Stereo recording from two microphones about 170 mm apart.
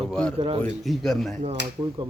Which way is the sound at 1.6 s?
90° right.